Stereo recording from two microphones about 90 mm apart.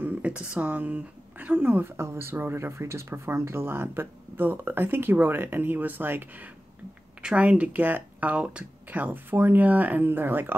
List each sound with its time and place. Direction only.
0.0 s speech: 20° right (ahead or behind)